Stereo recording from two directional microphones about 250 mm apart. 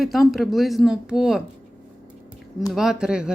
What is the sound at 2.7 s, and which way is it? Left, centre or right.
Speech, centre.